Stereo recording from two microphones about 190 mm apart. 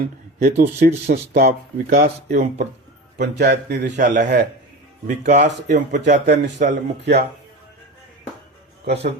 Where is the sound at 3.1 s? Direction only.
60° right (ahead or behind).